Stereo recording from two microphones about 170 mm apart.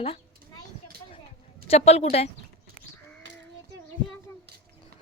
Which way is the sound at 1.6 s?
40° left (ahead or behind).